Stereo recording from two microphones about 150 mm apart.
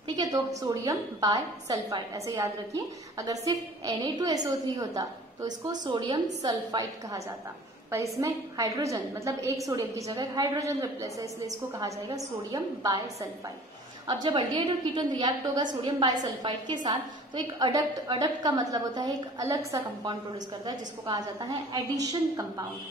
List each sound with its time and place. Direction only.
0.1 s a woman's voice: 25° right (ahead or behind)
14.0 s a woman's voice: 30° right (ahead or behind)